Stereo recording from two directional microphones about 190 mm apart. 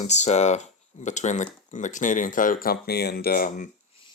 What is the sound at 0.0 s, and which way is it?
Speech, 35° left (ahead or behind).